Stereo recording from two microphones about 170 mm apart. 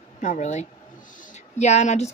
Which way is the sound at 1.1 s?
45° left (ahead or behind).